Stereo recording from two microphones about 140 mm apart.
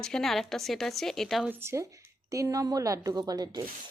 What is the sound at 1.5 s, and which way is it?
A woman's voice, 20° right (ahead or behind).